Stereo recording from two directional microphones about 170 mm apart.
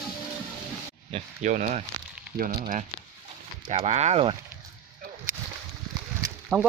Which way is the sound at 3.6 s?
35° right (ahead or behind).